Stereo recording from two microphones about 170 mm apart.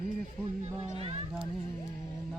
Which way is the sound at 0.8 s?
35° right (ahead or behind).